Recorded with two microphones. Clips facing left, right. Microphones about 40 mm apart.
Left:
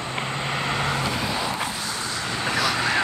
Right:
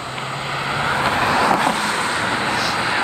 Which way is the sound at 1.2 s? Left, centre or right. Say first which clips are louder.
Right 10 dB; right.